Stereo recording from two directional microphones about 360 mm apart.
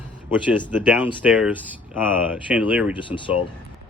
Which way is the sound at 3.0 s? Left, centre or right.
Centre.